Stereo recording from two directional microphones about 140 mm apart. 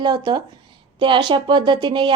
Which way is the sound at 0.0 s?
30° right (ahead or behind).